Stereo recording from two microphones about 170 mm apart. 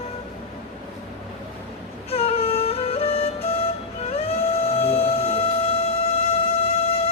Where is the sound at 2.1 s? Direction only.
35° left (ahead or behind).